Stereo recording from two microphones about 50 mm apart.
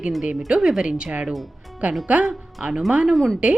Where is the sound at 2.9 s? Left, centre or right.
Centre.